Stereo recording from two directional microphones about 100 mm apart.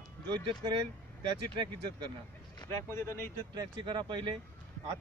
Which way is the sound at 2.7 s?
25° left (ahead or behind).